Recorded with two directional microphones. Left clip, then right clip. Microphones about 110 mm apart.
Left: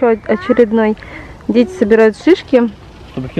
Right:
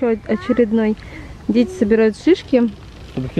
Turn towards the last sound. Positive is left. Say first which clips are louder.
# left 2 dB
turn(degrees=15)  # may be behind; listen again after turning